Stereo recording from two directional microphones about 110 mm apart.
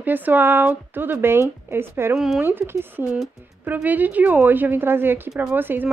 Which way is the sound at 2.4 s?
20° right (ahead or behind).